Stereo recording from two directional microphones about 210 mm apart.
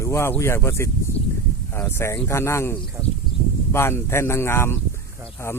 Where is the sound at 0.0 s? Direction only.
15° left (ahead or behind).